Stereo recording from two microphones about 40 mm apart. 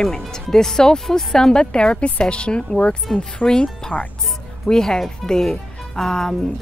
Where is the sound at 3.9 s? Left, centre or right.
Left.